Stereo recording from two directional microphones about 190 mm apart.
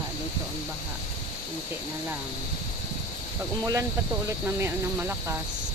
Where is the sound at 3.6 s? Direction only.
15° right (ahead or behind).